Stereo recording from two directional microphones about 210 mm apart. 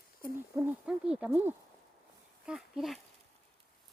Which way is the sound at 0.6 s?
5° right (ahead or behind).